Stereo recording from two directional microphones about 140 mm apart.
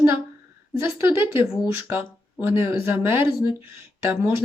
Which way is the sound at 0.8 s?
20° right (ahead or behind).